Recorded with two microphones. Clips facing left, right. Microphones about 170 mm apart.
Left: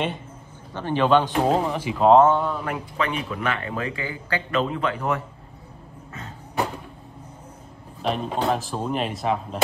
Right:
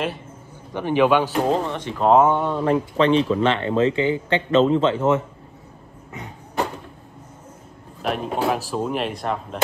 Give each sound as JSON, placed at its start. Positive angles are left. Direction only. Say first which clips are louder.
{"t": 0.7, "sound": "speech", "louder": "right 2 dB", "side_deg": -15}
{"t": 2.2, "sound": "speech", "louder": "right 2 dB", "side_deg": -20}
{"t": 8.0, "sound": "speech", "louder": "right 1 dB", "side_deg": -5}